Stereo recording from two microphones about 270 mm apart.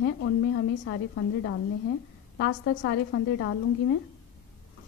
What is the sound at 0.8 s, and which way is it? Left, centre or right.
A woman's voice, left.